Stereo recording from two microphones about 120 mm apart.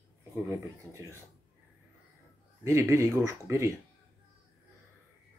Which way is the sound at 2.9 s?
25° right (ahead or behind).